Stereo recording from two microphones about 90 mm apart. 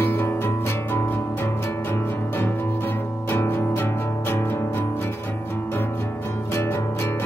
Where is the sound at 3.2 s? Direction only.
25° left (ahead or behind).